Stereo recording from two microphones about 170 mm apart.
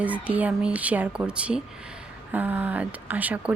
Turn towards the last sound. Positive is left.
turn(degrees=-10)  # may be behind; listen again after turning